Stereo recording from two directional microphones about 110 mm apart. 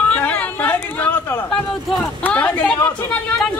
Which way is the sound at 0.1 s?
15° left (ahead or behind).